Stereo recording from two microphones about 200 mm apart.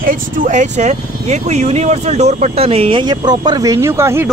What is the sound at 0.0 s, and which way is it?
Speech, 45° right (ahead or behind).